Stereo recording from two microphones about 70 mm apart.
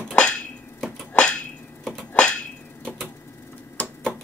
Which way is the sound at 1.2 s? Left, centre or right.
Centre.